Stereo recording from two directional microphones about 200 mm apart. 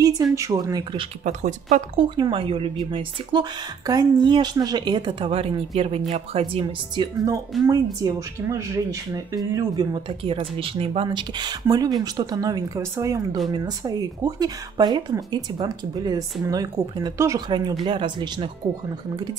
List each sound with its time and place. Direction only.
0.0 s a woman's voice: 15° right (ahead or behind)
1.2 s speech: 40° right (ahead or behind)
2.0 s speech: 25° right (ahead or behind)